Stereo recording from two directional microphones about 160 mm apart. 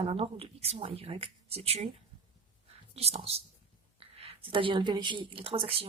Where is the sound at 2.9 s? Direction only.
40° right (ahead or behind).